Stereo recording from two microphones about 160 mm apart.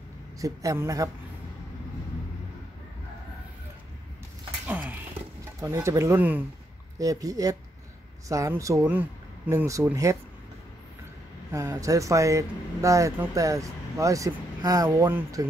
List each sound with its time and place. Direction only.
0.4 s speech: 20° right (ahead or behind)
4.6 s a sound: 10° right (ahead or behind)
5.6 s speech: 20° right (ahead or behind)
11.5 s speech: 20° right (ahead or behind)